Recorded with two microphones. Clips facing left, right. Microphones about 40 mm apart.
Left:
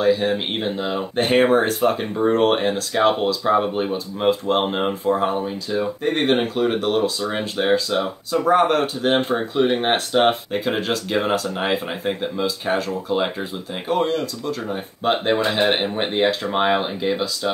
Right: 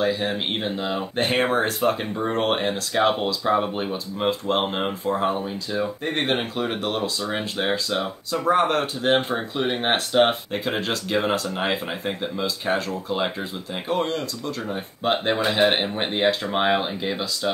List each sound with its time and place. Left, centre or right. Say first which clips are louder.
0.0 s speech: left 5 dB; centre